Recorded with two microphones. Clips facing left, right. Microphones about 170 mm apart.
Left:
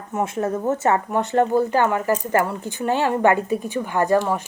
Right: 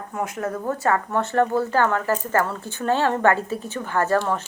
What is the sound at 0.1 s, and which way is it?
Speech, 25° left (ahead or behind).